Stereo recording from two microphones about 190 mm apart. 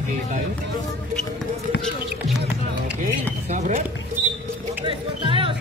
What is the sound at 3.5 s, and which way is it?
Speech, 40° right (ahead or behind).